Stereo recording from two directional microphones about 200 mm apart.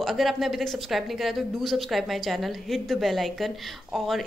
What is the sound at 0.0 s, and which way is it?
Speech, centre (ahead or behind).